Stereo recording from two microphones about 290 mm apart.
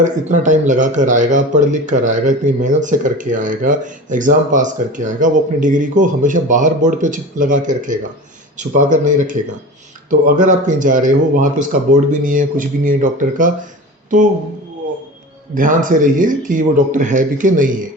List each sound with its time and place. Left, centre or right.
0.0 s speech: right
15.5 s speech: right